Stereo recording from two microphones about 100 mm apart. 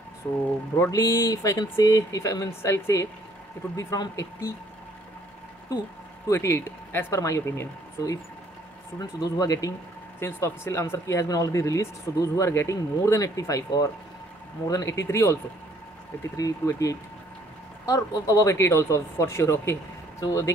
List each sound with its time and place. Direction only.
0.7 s speech: 30° left (ahead or behind)
6.2 s speech: 30° left (ahead or behind)
16.3 s speech: 35° left (ahead or behind)